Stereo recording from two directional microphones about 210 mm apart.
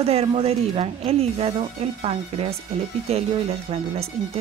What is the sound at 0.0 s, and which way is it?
Speech, 30° right (ahead or behind).